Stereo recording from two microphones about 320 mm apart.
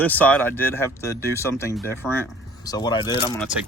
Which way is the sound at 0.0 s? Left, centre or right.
Centre.